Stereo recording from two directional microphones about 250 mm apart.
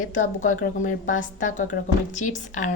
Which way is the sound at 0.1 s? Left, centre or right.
Left.